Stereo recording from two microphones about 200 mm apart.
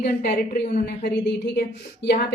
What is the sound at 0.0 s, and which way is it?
A woman's voice, 50° left (ahead or behind).